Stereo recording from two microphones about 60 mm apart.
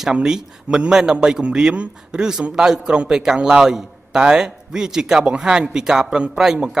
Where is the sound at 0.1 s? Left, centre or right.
Centre.